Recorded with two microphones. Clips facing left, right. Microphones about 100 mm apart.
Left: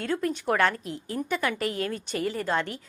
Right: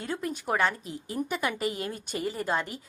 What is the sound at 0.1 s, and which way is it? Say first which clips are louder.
Speech: left 3 dB; 5° right (ahead or behind).